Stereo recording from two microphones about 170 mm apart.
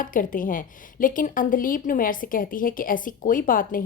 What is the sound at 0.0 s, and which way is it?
A woman's voice, 50° left (ahead or behind).